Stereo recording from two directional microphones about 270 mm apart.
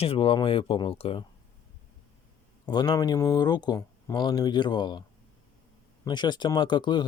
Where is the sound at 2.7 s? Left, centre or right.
Centre.